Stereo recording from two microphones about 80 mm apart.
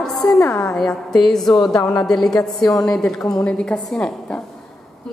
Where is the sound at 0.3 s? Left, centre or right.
Left.